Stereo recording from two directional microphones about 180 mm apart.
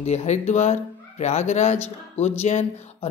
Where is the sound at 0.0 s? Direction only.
40° left (ahead or behind).